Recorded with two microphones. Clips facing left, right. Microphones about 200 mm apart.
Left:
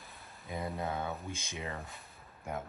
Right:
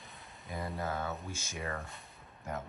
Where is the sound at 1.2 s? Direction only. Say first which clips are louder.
Left 1 dB; 55° left (ahead or behind).